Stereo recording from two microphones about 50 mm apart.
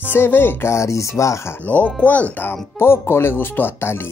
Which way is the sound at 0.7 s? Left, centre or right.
Left.